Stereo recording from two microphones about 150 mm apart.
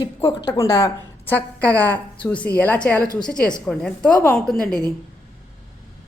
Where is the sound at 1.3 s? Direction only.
10° left (ahead or behind).